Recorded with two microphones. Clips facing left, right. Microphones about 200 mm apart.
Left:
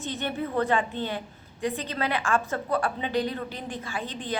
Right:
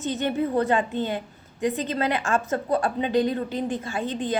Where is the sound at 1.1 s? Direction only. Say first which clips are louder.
Right 3 dB; 20° right (ahead or behind).